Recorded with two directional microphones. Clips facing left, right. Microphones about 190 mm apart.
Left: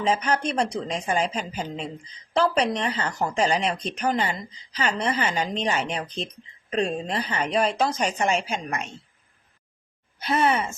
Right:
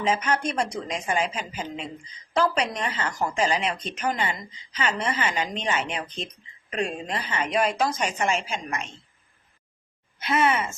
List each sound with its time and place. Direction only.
0.0 s speech: 35° left (ahead or behind)
10.2 s speech: 35° left (ahead or behind)